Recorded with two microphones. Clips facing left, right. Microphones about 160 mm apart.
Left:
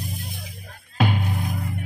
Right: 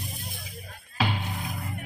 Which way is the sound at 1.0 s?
50° left (ahead or behind).